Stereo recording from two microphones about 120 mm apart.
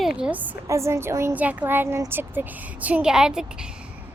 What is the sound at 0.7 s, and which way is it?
Speech, 25° right (ahead or behind).